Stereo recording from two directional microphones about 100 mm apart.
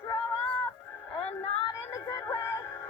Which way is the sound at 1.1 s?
75° left (ahead or behind).